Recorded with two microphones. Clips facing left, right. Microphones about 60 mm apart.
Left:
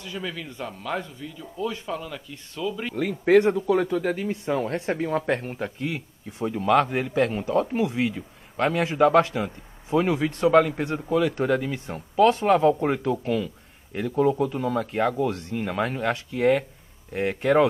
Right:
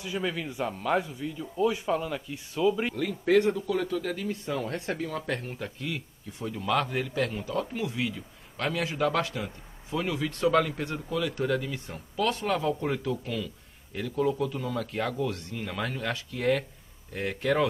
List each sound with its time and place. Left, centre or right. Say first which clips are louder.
0.0 s speech: right 2 dB; centre
3.0 s speech: left 8 dB; left